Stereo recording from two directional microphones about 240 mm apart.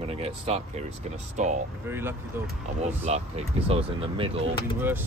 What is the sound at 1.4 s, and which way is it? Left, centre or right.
Speech, right.